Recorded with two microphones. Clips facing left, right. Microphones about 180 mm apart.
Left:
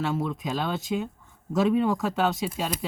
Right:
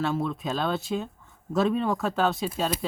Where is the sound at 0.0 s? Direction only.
15° left (ahead or behind).